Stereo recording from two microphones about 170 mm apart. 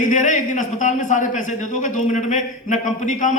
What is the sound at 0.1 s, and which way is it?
A man's voice, 50° left (ahead or behind).